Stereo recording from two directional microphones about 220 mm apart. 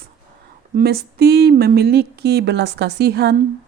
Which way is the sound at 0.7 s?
45° right (ahead or behind).